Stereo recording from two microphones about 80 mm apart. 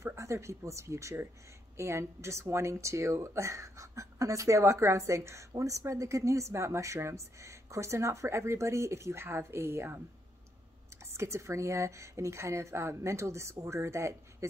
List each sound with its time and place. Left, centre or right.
0.0 s a woman's voice: right
11.1 s a woman's voice: right